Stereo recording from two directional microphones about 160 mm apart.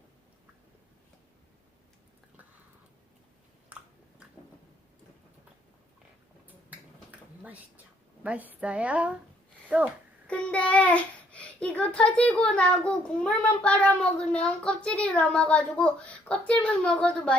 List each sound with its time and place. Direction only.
8.2 s a woman's voice: 10° right (ahead or behind)
10.2 s a child's voice: 5° left (ahead or behind)